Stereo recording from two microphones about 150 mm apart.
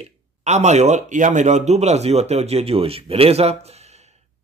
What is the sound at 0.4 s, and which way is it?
Speech, 50° right (ahead or behind).